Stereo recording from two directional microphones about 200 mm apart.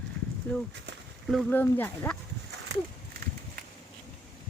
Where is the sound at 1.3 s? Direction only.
10° left (ahead or behind).